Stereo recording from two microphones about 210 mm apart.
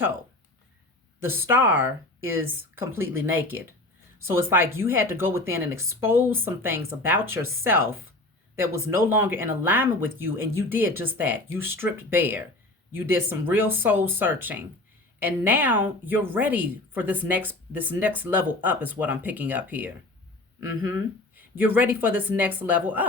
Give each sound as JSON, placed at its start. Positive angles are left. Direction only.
{"t": 1.2, "sound": "a woman's voice", "side_deg": -10}
{"t": 9.0, "sound": "a woman's voice", "side_deg": -10}
{"t": 21.3, "sound": "a woman's voice", "side_deg": -10}